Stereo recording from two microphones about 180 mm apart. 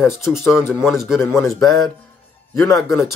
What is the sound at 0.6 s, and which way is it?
Speech, 15° left (ahead or behind).